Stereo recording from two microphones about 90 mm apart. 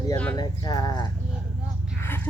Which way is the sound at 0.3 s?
50° left (ahead or behind).